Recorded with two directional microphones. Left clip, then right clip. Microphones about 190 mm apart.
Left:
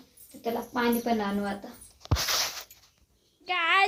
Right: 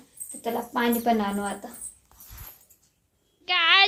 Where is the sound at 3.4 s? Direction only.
10° left (ahead or behind).